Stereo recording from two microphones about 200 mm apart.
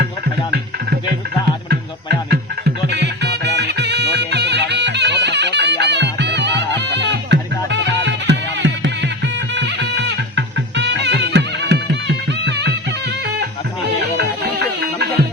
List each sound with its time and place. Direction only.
2.3 s music: 55° right (ahead or behind)